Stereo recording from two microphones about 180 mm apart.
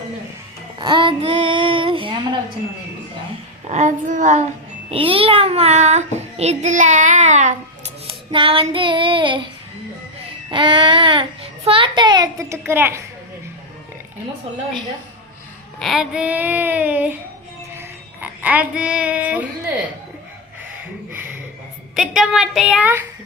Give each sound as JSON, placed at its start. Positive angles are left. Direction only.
{"t": 0.8, "sound": "child singing", "side_deg": -25}
{"t": 3.7, "sound": "speech", "side_deg": -40}
{"t": 4.9, "sound": "child singing", "side_deg": -30}
{"t": 8.0, "sound": "child singing", "side_deg": -30}
{"t": 10.5, "sound": "a child's voice", "side_deg": -25}
{"t": 15.8, "sound": "speech", "side_deg": 0}
{"t": 17.7, "sound": "child singing", "side_deg": -10}
{"t": 21.1, "sound": "a sound", "side_deg": -10}
{"t": 21.9, "sound": "a woman's voice", "side_deg": -5}